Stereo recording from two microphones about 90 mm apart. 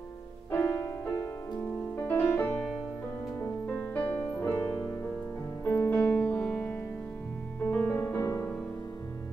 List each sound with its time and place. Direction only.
0.5 s music: 25° left (ahead or behind)
5.6 s music: 25° left (ahead or behind)
5.9 s music: 15° left (ahead or behind); by 8.5 s 35° left (ahead or behind)